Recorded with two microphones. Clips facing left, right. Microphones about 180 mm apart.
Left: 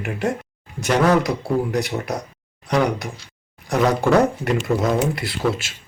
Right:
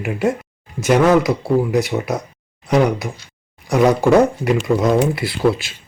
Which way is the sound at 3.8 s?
20° right (ahead or behind).